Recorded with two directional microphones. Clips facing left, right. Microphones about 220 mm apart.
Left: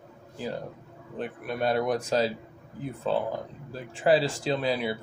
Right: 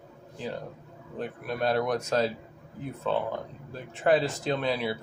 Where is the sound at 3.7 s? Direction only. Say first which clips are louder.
Left 1 dB; 30° left (ahead or behind).